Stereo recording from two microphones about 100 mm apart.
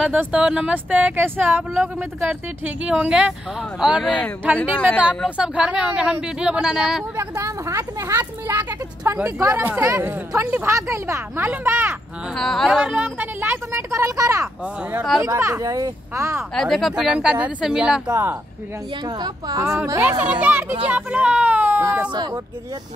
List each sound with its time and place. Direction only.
0.0 s speech: 10° right (ahead or behind)
4.7 s a woman's voice: 10° left (ahead or behind)
5.4 s speech: 10° right (ahead or behind)
7.2 s speech: 30° right (ahead or behind)
12.4 s speech: 5° left (ahead or behind)
12.8 s speech: 15° right (ahead or behind)
16.5 s speech: centre (ahead or behind)
19.0 s speech: 45° right (ahead or behind)
19.6 s speech: 25° right (ahead or behind)
20.0 s speech: 15° right (ahead or behind)